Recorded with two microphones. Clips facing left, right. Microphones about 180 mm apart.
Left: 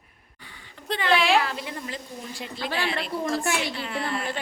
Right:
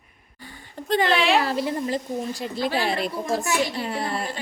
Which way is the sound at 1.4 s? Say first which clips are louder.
Right 7 dB; 35° right (ahead or behind).